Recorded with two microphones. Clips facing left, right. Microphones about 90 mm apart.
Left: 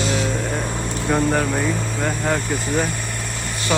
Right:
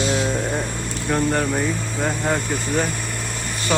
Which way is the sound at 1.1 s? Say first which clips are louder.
Left 1 dB; 5° left (ahead or behind).